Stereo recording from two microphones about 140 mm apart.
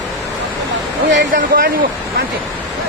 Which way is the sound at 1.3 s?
90° right.